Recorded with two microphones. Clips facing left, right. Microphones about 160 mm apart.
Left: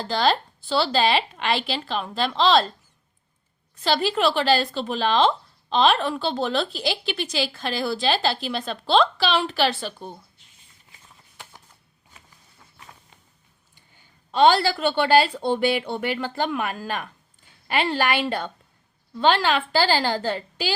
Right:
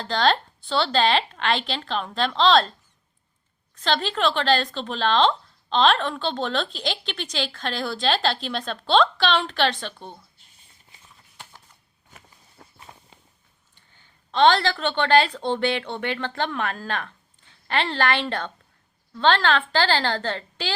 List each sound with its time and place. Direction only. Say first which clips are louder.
0.0 s speech: even; 5° left (ahead or behind)
3.8 s speech: left 2 dB; 5° left (ahead or behind)
12.6 s walk: right 7 dB; 40° right (ahead or behind)
13.7 s a woman's voice: left 2 dB; 10° left (ahead or behind)